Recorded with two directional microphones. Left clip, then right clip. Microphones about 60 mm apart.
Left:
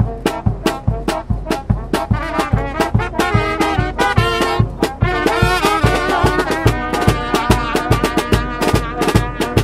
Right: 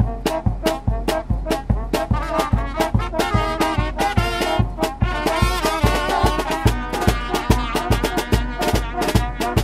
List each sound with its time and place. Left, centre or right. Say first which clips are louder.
1.0 s brass instrument: left 1 dB; centre
1.9 s music: left 2 dB; left
5.3 s music: left 5 dB; left
5.8 s music: left 4 dB; centre
6.1 s music: left 4 dB; left
6.6 s music: left 5 dB; left
7.6 s music: left 5 dB; left
8.0 s music: left 5 dB; left